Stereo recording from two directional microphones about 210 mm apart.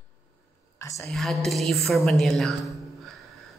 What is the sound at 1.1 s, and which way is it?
Speech, centre (ahead or behind).